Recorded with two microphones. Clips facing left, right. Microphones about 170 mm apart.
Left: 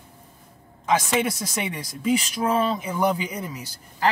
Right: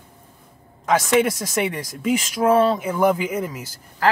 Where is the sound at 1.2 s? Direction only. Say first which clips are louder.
Right 6 dB; 10° right (ahead or behind).